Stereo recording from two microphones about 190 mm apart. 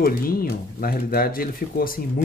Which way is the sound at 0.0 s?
50° left (ahead or behind).